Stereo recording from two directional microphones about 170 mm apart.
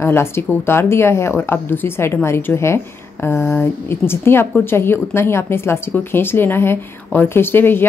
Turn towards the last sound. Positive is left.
turn(degrees=10)  # may be behind; listen again after turning